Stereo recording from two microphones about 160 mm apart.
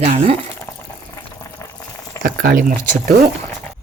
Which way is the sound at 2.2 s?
60° right (ahead or behind).